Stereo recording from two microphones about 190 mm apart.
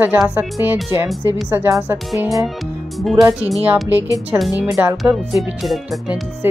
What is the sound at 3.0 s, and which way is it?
Music, centre (ahead or behind).